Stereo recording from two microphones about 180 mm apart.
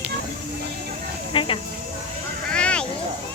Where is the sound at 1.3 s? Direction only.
30° left (ahead or behind).